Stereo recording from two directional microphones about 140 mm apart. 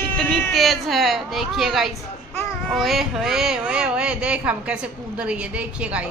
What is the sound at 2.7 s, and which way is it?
Speech, centre (ahead or behind).